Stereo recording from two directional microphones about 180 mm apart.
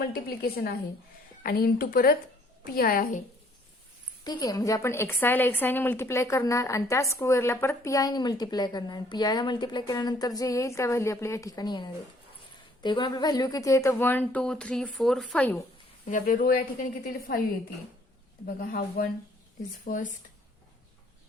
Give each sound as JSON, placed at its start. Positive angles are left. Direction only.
{"t": 0.0, "sound": "a woman's voice", "side_deg": 55}
{"t": 4.2, "sound": "a woman's voice", "side_deg": 20}
{"t": 16.0, "sound": "a woman's voice", "side_deg": 50}